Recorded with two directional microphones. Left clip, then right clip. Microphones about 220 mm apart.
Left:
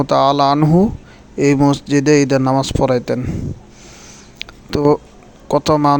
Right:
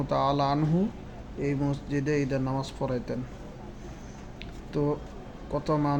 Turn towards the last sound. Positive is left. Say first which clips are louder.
# left 15 dB
turn(degrees=50)  # may be behind; listen again after turning